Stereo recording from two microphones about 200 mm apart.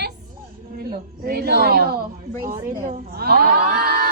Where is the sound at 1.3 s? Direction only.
50° right (ahead or behind).